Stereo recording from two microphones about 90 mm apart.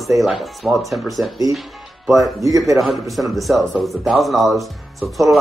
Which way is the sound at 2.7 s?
Centre (ahead or behind).